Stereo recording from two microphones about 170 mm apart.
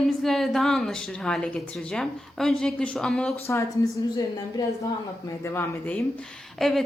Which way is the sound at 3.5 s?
15° left (ahead or behind).